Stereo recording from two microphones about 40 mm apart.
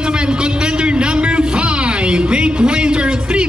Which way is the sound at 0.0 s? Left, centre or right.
Right.